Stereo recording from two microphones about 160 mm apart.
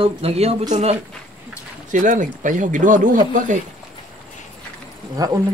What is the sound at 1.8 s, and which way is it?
Speech, 50° right (ahead or behind).